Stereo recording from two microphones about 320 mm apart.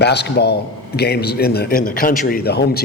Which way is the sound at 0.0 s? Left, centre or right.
Left.